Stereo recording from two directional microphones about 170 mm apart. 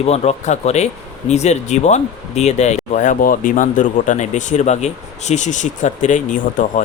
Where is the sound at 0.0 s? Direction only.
40° left (ahead or behind).